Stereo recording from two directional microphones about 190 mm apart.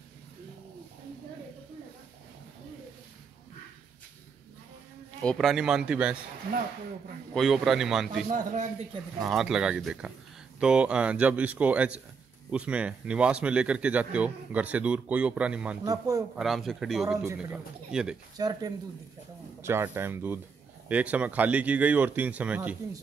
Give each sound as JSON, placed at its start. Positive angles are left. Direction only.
{"t": 5.2, "sound": "speech", "side_deg": 0}
{"t": 7.3, "sound": "speech", "side_deg": 0}
{"t": 8.3, "sound": "speech", "side_deg": -40}
{"t": 9.2, "sound": "speech", "side_deg": 0}
{"t": 15.8, "sound": "speech", "side_deg": -20}
{"t": 16.3, "sound": "speech", "side_deg": 0}
{"t": 18.4, "sound": "speech", "side_deg": -20}